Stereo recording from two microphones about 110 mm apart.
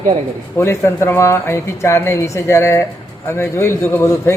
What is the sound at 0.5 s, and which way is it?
Speech, 25° left (ahead or behind).